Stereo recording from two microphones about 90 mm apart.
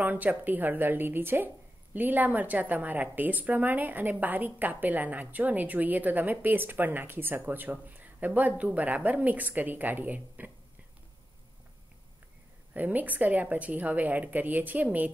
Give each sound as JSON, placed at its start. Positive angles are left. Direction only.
{"t": 0.0, "sound": "a woman's voice", "side_deg": -20}
{"t": 12.7, "sound": "a woman's voice", "side_deg": -20}